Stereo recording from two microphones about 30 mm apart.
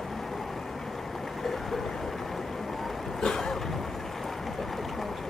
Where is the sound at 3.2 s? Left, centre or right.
Centre.